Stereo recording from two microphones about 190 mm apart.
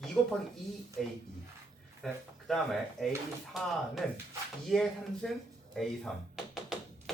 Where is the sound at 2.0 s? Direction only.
Centre (ahead or behind).